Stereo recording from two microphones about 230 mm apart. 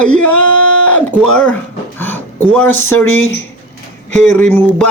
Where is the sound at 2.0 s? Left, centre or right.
Centre.